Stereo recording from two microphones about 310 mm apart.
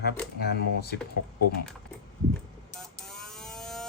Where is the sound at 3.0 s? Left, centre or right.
Centre.